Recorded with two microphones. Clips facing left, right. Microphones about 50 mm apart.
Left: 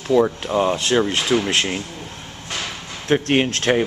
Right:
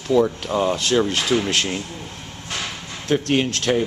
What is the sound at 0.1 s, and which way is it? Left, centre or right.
Speech, left.